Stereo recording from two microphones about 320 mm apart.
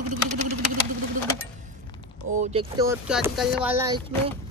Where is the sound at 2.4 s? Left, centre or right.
Centre.